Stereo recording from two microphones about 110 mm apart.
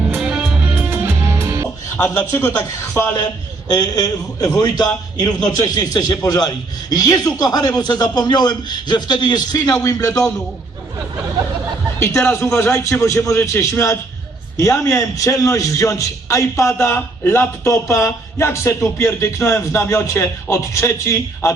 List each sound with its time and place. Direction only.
0.1 s music: 10° right (ahead or behind)
0.9 s music: 20° right (ahead or behind)
2.0 s a man's voice: 25° left (ahead or behind)
3.7 s a man's voice: 35° left (ahead or behind)
11.9 s a man's voice: 25° left (ahead or behind)